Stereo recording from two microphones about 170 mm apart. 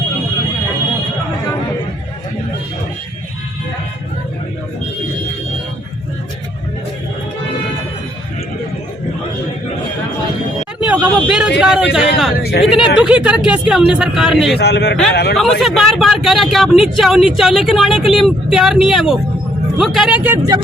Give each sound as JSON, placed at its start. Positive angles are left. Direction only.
{"t": 10.8, "sound": "vehicle", "side_deg": -5}
{"t": 11.6, "sound": "a man's voice", "side_deg": -5}
{"t": 12.4, "sound": "speech", "side_deg": 70}
{"t": 12.6, "sound": "speech", "side_deg": 0}
{"t": 14.6, "sound": "a man's voice", "side_deg": 80}
{"t": 15.6, "sound": "speech", "side_deg": 0}